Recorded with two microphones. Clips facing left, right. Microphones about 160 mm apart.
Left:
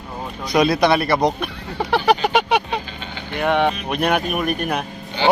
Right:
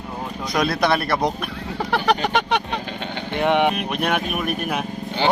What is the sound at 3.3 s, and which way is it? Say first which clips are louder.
Speech: even; 20° right (ahead or behind).